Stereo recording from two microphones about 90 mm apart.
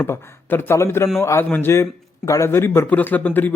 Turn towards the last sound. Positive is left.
turn(degrees=20)  # may be behind; listen again after turning